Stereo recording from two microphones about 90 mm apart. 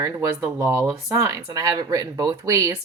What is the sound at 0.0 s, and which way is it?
Speech, 30° right (ahead or behind).